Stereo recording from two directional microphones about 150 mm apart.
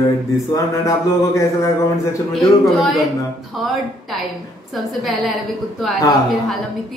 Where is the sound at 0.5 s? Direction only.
20° left (ahead or behind).